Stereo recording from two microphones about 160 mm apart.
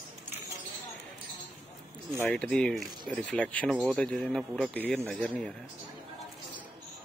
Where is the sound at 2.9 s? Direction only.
30° right (ahead or behind).